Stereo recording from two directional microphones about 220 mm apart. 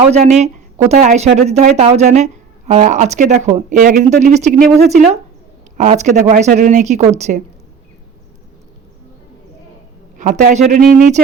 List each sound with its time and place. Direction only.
0.1 s speech: 30° right (ahead or behind)
10.2 s speech: 35° right (ahead or behind)